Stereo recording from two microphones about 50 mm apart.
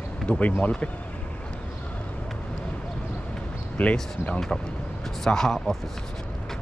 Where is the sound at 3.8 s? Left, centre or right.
Left.